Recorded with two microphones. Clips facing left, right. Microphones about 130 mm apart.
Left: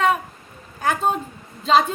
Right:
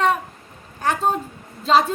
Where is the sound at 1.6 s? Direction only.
Centre (ahead or behind).